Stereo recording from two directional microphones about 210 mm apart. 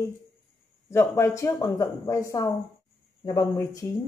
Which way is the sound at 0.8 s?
10° left (ahead or behind).